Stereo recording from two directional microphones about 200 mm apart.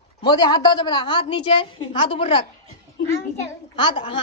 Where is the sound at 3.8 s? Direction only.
25° left (ahead or behind).